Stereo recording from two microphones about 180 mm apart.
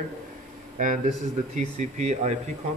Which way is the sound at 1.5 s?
40° right (ahead or behind).